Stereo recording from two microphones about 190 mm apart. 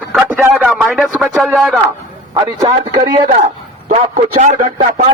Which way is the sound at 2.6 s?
25° right (ahead or behind).